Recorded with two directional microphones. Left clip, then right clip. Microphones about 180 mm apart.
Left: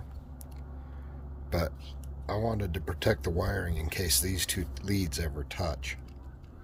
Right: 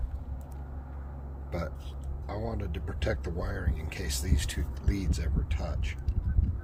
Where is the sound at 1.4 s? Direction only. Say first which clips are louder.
Left 5 dB; 70° left (ahead or behind).